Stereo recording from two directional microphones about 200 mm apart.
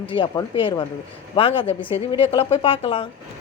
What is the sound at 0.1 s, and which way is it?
A woman's voice, 25° left (ahead or behind).